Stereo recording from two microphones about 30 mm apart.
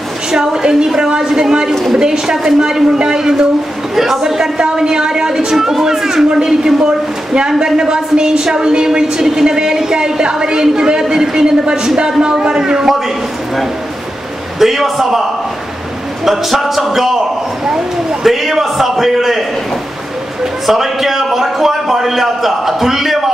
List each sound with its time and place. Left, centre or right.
0.3 s speech: right
3.9 s a man's voice: centre
4.3 s speech: right
10.6 s music: centre
11.0 s speech: right
12.2 s speech: right
14.6 s music: centre
16.3 s music: centre
18.2 s a sound: centre
20.6 s a sound: centre